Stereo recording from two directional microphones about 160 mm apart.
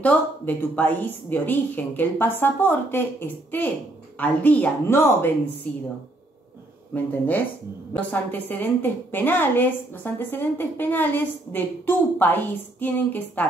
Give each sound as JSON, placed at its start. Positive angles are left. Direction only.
{"t": 0.0, "sound": "a woman's voice", "side_deg": 10}
{"t": 6.9, "sound": "a woman's voice", "side_deg": 10}